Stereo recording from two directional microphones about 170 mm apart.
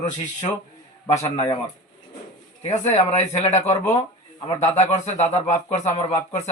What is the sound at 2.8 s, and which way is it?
Speech, 40° left (ahead or behind).